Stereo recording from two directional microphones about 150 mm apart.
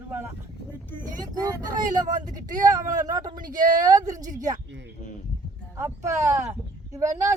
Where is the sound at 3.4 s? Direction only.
65° right (ahead or behind).